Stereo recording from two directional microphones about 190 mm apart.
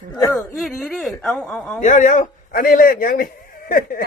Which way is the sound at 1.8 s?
40° left (ahead or behind).